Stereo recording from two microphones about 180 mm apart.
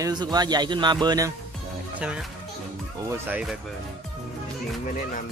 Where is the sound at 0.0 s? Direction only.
20° right (ahead or behind).